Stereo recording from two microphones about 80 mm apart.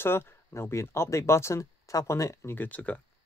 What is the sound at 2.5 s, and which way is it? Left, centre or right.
Speech, centre.